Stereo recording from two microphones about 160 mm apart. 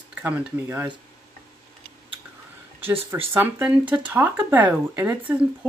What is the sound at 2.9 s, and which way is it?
Speech, 35° right (ahead or behind).